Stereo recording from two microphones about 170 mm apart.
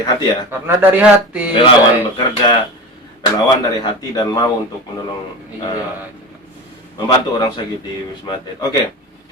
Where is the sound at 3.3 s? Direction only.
20° left (ahead or behind).